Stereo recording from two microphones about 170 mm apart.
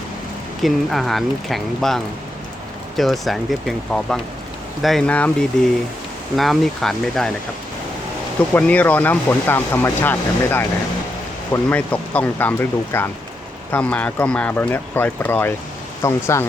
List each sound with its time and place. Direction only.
0.6 s speech: centre (ahead or behind)
3.0 s speech: centre (ahead or behind)
8.5 s speech: 10° left (ahead or behind)